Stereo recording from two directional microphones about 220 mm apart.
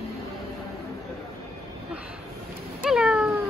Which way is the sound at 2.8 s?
5° right (ahead or behind).